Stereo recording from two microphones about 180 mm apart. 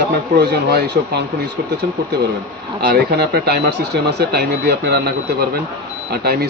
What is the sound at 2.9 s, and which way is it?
Speech, 60° right (ahead or behind).